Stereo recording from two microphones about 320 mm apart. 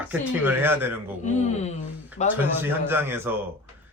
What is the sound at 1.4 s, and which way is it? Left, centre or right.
Speech, left.